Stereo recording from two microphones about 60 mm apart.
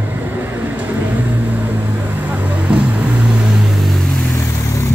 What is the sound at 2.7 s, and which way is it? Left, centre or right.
Vehicle, centre.